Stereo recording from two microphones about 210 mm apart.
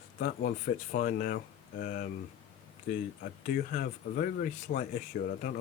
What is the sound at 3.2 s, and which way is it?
Speech, 40° left (ahead or behind).